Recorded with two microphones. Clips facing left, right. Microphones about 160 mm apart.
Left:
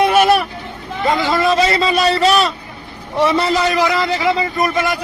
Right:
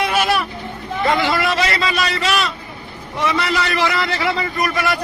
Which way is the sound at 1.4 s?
25° left (ahead or behind).